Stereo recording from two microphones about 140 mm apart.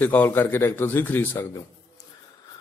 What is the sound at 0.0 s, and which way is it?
A man's voice, 15° left (ahead or behind).